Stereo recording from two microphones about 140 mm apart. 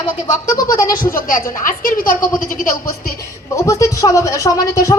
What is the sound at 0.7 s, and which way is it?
Speech, 80° left.